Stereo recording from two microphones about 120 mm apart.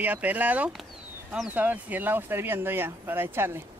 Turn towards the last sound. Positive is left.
turn(degrees=-20)  # may be behind; listen again after turning